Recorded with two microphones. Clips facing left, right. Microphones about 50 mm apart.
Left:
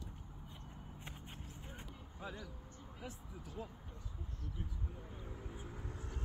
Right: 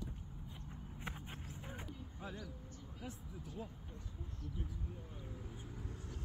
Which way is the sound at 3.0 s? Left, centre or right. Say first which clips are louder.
Even; centre.